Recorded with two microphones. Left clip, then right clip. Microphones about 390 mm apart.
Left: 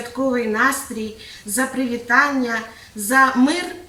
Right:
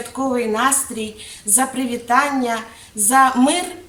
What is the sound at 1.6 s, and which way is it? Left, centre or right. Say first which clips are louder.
A woman's voice: left 1 dB; centre.